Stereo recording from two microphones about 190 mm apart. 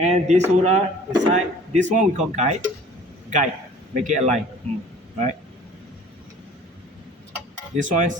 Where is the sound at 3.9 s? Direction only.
40° right (ahead or behind).